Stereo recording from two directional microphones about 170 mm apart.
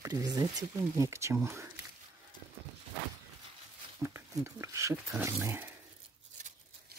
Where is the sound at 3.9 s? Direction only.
15° right (ahead or behind).